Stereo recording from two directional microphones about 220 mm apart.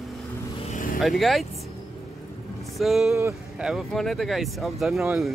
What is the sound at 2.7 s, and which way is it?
A man's voice, centre (ahead or behind).